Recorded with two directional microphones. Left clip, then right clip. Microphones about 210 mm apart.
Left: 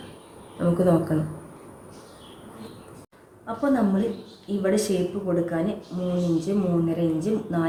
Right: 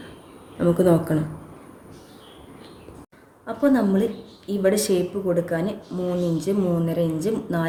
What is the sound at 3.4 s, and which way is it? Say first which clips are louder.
A woman's voice: right 3 dB; 50° right (ahead or behind).